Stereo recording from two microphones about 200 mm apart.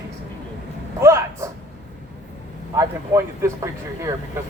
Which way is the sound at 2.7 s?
15° right (ahead or behind).